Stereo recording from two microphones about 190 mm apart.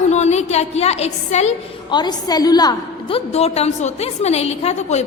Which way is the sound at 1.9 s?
20° left (ahead or behind).